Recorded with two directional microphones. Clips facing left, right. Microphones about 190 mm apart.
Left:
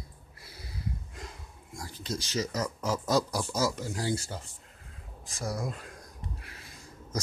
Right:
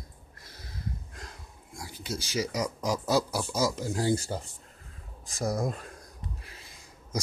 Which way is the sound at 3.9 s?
35° right (ahead or behind).